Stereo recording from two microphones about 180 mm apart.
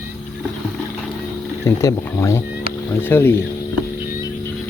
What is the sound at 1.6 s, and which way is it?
Speech, 15° left (ahead or behind).